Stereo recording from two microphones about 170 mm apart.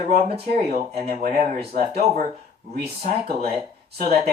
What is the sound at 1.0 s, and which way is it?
Speech, 45° right (ahead or behind).